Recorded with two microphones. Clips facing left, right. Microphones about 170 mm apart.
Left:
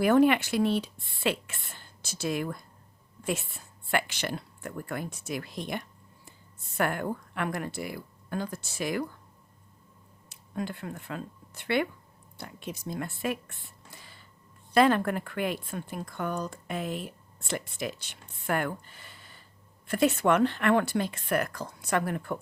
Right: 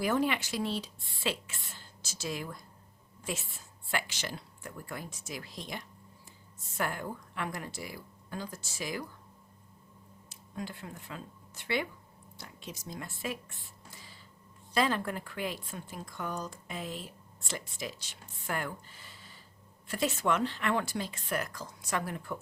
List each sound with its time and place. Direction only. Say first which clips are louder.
0.0 s speech: left 8 dB; 60° left (ahead or behind)
10.2 s speech: left 6 dB; 60° left (ahead or behind)